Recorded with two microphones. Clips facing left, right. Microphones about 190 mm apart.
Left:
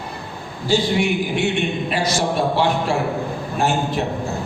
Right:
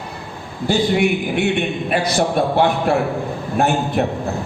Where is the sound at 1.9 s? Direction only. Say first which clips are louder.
Right 6 dB; 55° right (ahead or behind).